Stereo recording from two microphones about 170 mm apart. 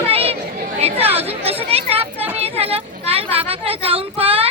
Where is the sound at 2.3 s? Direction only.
35° right (ahead or behind).